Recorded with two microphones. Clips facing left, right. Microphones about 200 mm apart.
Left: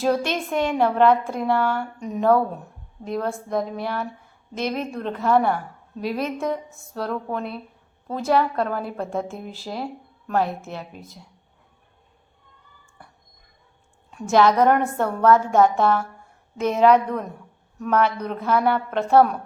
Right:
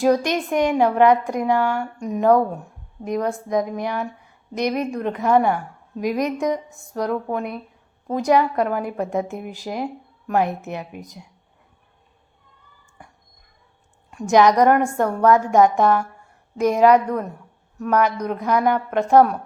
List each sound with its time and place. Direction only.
0.0 s a woman's voice: 15° right (ahead or behind)
13.0 s a sound: 10° right (ahead or behind)
14.1 s a woman's voice: 15° right (ahead or behind)